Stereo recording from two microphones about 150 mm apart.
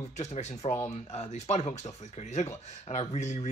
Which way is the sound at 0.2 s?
50° left (ahead or behind).